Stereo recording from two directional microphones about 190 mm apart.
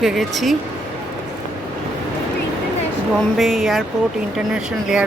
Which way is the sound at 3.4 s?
Centre (ahead or behind).